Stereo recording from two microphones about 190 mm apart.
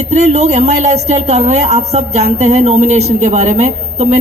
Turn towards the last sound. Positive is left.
turn(degrees=-35)  # may be behind; listen again after turning